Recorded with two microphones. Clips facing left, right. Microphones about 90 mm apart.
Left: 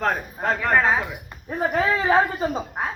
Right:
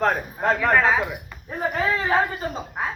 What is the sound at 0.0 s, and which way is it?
A man's voice, centre (ahead or behind).